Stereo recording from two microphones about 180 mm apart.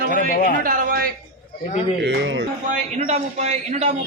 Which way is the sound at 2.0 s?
85° right.